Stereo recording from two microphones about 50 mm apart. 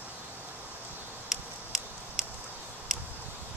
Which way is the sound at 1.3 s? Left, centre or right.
Centre.